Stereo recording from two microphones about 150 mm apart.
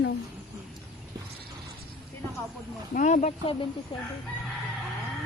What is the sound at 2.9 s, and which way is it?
Speech, 55° left (ahead or behind).